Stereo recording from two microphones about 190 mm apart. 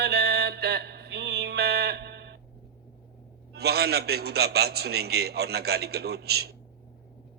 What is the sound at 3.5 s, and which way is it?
A man's voice, 55° right (ahead or behind).